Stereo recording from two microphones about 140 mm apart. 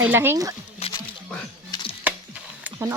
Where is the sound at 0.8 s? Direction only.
45° left (ahead or behind).